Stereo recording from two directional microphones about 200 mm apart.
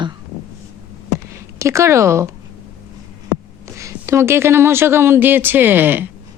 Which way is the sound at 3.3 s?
15° right (ahead or behind).